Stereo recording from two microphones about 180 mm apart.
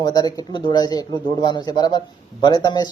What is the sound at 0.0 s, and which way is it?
Speech, 20° left (ahead or behind).